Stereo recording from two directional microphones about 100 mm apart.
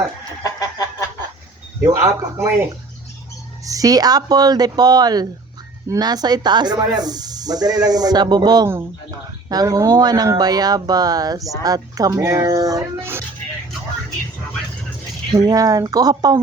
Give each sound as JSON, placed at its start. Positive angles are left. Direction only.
{"t": 0.4, "sound": "chicken", "side_deg": 35}
{"t": 1.8, "sound": "speech", "side_deg": -30}
{"t": 3.7, "sound": "speech", "side_deg": -35}
{"t": 13.0, "sound": "speech", "side_deg": -25}
{"t": 15.4, "sound": "speech", "side_deg": -40}